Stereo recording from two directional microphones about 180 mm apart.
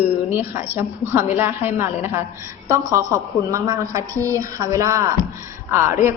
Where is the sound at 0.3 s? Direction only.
10° right (ahead or behind).